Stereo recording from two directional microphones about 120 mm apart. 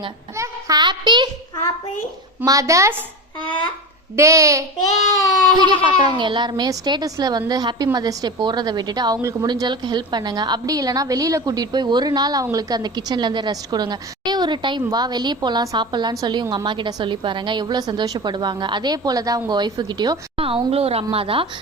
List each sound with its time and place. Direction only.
0.3 s child singing: 25° right (ahead or behind)
0.8 s a woman's voice: 40° right (ahead or behind)
2.4 s speech: 25° right (ahead or behind)
4.2 s speech: 25° right (ahead or behind)
5.5 s a woman's voice: 40° right (ahead or behind)